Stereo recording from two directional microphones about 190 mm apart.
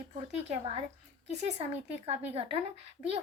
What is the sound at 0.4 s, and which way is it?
A woman's voice, 35° right (ahead or behind).